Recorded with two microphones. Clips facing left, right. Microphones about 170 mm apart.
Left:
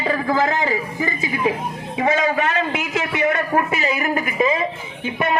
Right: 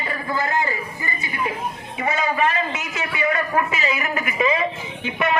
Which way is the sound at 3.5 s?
55° left (ahead or behind).